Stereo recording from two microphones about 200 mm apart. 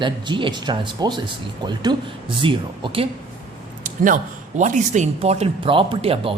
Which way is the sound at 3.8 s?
40° right (ahead or behind).